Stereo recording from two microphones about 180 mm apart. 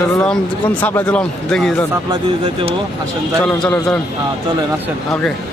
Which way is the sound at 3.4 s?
5° left (ahead or behind).